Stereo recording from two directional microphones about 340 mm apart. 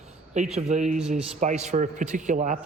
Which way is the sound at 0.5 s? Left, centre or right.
Centre.